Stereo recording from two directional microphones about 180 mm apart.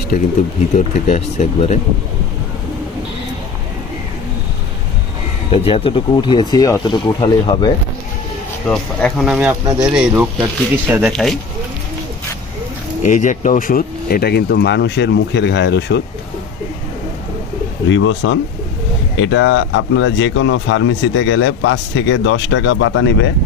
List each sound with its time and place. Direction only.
0.1 s speech: 45° left (ahead or behind)
5.5 s speech: 30° left (ahead or behind)
8.7 s speech: 5° left (ahead or behind)
13.0 s speech: 45° left (ahead or behind); by 16.0 s 75° left (ahead or behind)
17.8 s speech: 90° left